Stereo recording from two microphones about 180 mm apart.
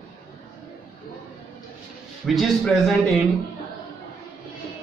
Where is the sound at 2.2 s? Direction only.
Centre (ahead or behind).